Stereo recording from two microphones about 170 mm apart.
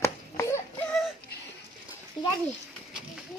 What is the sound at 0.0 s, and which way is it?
Baby cry, 15° left (ahead or behind).